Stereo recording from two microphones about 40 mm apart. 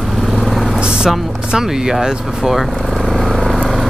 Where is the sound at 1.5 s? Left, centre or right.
Centre.